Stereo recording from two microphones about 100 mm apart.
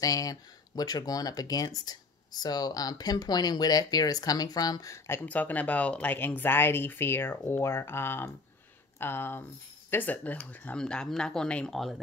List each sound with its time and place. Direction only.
0.0 s speech: 35° left (ahead or behind); by 12.0 s centre (ahead or behind)